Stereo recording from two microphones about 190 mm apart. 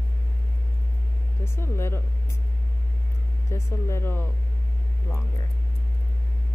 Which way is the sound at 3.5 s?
15° left (ahead or behind).